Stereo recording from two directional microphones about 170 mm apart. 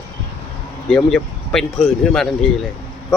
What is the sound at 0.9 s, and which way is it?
Speech, 5° left (ahead or behind).